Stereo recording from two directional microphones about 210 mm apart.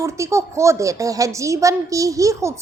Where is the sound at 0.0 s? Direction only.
15° right (ahead or behind).